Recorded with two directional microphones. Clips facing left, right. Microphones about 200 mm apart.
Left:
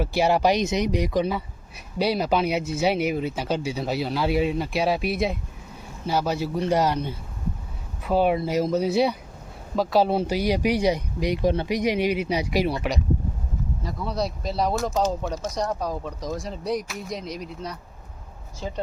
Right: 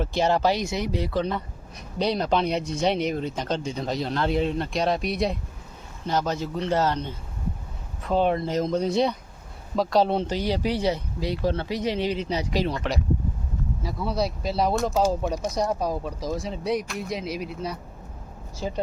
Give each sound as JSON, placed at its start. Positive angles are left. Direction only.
{"t": 0.0, "sound": "speech", "side_deg": 10}
{"t": 13.8, "sound": "speech", "side_deg": -5}
{"t": 15.0, "sound": "speech", "side_deg": -10}